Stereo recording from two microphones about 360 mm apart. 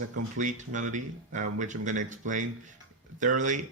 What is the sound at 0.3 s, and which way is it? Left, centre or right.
Speech, right.